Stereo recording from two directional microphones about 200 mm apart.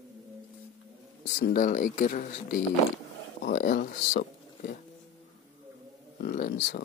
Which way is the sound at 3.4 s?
55° left (ahead or behind).